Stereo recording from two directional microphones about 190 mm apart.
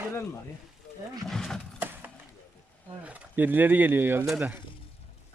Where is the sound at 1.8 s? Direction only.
10° right (ahead or behind).